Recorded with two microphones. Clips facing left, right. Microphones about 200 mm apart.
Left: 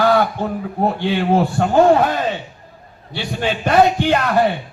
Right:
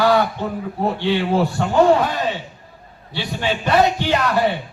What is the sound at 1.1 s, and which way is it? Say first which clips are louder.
Speech: even; 45° left (ahead or behind).